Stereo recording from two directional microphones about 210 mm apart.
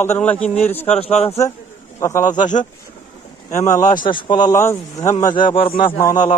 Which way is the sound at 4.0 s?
20° left (ahead or behind).